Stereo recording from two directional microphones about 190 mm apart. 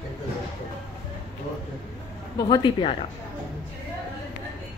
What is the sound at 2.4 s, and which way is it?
Speech, 20° left (ahead or behind).